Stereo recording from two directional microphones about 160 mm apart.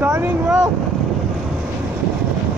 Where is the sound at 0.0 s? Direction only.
10° right (ahead or behind).